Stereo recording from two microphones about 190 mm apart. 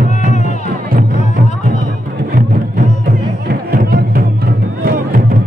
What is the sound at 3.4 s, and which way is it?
Music, 50° right (ahead or behind).